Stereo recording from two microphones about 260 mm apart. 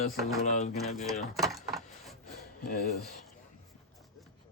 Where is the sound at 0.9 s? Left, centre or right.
Centre.